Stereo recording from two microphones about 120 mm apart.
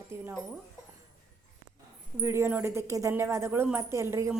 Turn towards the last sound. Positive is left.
turn(degrees=-20)  # may be behind; listen again after turning